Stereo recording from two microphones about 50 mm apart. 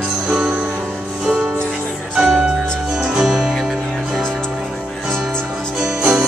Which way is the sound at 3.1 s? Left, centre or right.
Centre.